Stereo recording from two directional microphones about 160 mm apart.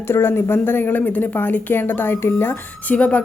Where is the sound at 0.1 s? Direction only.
15° left (ahead or behind).